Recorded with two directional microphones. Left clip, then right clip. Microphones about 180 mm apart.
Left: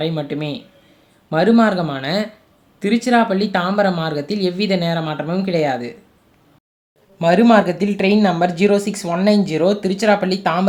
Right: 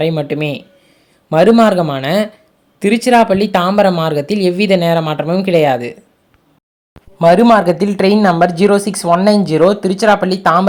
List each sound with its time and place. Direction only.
0.0 s speech: 45° right (ahead or behind)
7.2 s speech: 25° right (ahead or behind)